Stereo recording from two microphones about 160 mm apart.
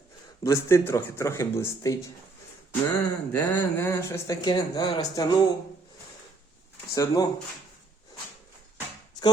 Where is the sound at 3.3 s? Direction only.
10° left (ahead or behind).